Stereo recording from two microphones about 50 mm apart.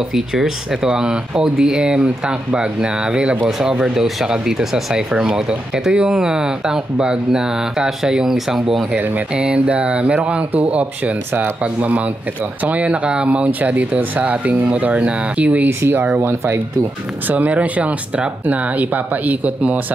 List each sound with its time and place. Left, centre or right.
0.1 s speech: centre
8.9 s speech: right
15.8 s speech: right
17.3 s speech: right